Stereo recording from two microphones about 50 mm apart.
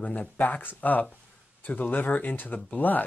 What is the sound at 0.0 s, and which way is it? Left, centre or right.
Speech, left.